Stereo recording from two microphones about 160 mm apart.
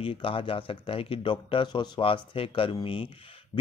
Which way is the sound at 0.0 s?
35° left (ahead or behind).